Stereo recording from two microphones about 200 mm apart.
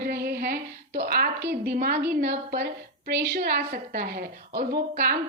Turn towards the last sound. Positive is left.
turn(degrees=-50)  # may be behind; listen again after turning